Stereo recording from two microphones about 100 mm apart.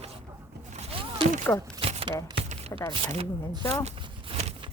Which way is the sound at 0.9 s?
60° right (ahead or behind).